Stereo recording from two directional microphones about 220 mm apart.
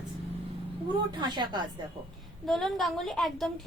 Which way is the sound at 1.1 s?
20° right (ahead or behind).